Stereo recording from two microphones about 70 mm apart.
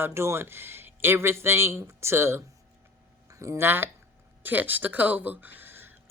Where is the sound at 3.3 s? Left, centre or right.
Right.